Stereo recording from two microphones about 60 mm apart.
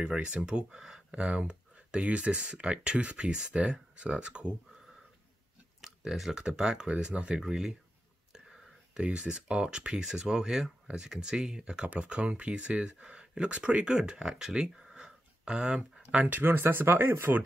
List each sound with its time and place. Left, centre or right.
0.0 s speech: centre
5.8 s speech: centre
7.4 s speech: centre; by 17.4 s right